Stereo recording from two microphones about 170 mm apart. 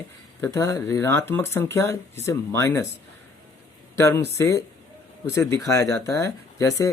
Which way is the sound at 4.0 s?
20° left (ahead or behind).